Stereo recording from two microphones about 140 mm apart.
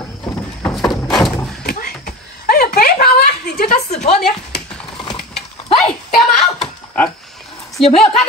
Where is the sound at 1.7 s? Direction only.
90° left.